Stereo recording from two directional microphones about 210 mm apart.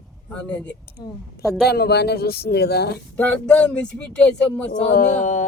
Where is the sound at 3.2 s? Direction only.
5° left (ahead or behind).